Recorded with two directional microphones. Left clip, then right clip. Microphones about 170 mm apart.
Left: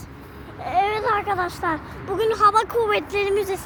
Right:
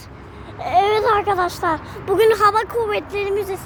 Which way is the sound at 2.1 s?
45° right (ahead or behind).